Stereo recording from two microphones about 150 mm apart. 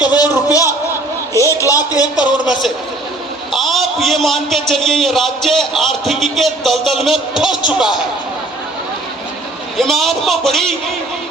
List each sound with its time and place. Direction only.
0.2 s a sound: 25° left (ahead or behind)
1.3 s a man's voice: 20° left (ahead or behind)
2.5 s a man's voice: centre (ahead or behind)
9.7 s a man's voice: centre (ahead or behind)